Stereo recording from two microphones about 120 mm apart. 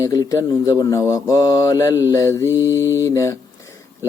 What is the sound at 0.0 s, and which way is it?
Speech, 30° left (ahead or behind).